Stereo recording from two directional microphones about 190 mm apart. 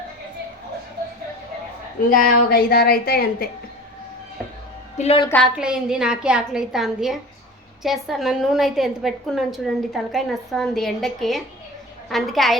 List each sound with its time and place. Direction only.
2.0 s speech: 45° left (ahead or behind)
4.9 s a woman's voice: 30° left (ahead or behind)
5.3 s a woman's voice: centre (ahead or behind)